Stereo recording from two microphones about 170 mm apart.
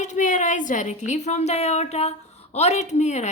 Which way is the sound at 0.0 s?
45° left (ahead or behind).